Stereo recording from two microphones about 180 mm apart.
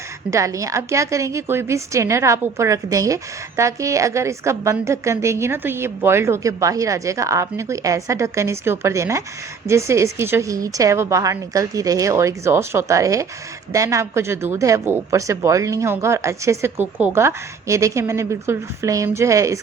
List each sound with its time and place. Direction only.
0.3 s a woman's voice: 15° right (ahead or behind)